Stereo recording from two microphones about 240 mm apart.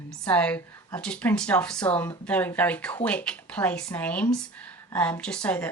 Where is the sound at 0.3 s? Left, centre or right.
Centre.